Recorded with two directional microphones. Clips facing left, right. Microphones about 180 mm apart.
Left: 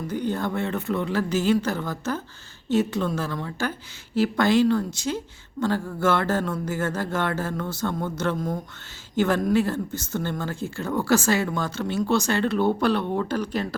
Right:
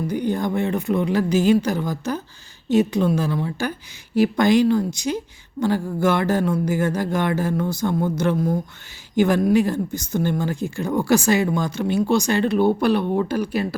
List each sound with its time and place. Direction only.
0.1 s a woman's voice: 15° right (ahead or behind)